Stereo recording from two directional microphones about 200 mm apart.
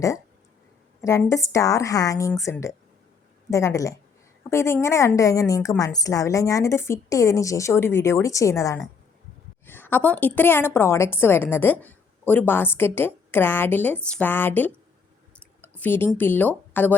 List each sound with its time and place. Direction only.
1.0 s a woman's voice: 15° left (ahead or behind)